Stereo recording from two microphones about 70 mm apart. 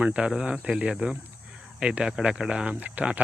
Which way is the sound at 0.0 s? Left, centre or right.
Centre.